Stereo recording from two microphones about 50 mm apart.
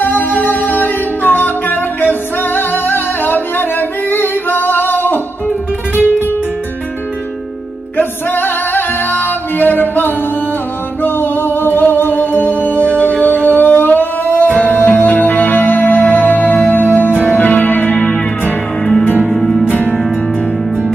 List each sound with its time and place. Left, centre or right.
0.0 s music: left
8.0 s music: left
19.2 s music: centre